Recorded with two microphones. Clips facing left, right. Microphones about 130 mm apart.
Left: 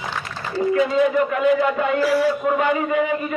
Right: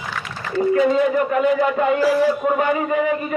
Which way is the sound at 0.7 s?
40° right (ahead or behind).